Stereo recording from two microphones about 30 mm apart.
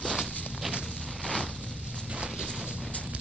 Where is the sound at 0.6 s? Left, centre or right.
Centre.